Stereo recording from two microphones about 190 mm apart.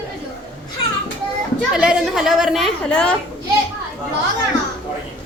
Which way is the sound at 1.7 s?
5° right (ahead or behind).